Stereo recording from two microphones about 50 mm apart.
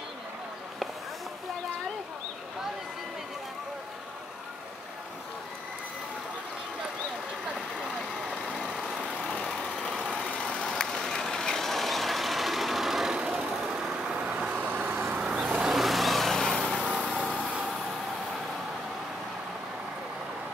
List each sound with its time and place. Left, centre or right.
8.7 s vehicle: centre
10.2 s vehicle: left; by 13.1 s centre
13.1 s vehicle: centre; by 15.1 s right
15.1 s vehicle: centre
15.6 s vehicle: centre
16.8 s lawn mower: centre